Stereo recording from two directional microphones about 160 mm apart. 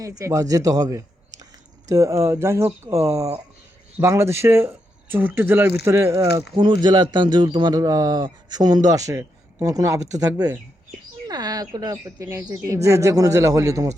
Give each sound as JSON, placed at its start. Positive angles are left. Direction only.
{"t": 0.0, "sound": "a man's voice", "side_deg": -20}